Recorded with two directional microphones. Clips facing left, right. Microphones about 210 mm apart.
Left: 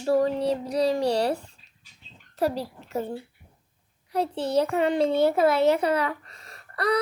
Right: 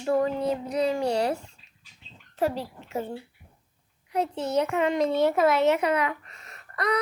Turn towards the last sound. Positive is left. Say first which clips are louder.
# left 2 dB
turn(degrees=35)  # may be behind; listen again after turning